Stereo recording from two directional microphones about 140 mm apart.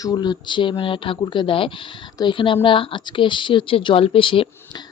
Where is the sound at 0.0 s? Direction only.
30° left (ahead or behind).